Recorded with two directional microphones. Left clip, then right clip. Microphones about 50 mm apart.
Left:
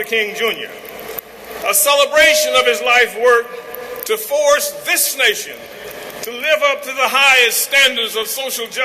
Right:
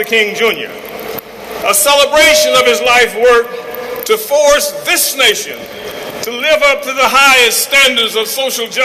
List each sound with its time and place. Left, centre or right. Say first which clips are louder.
0.0 s a man's voice: right 6 dB; left
1.6 s a man's voice: right 4 dB; left